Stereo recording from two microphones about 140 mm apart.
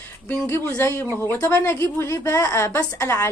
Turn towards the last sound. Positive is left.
turn(degrees=20)  # may be behind; listen again after turning